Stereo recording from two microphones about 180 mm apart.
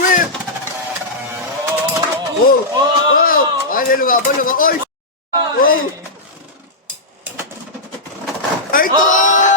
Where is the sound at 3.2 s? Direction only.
50° left (ahead or behind).